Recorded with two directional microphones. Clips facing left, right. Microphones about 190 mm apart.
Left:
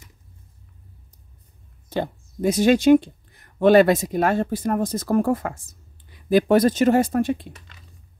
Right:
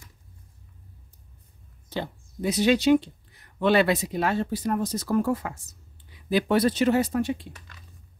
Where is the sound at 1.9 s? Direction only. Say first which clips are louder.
Left 6 dB; 50° left (ahead or behind).